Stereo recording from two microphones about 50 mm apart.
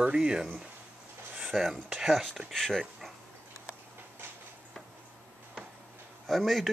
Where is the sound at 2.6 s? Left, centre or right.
Centre.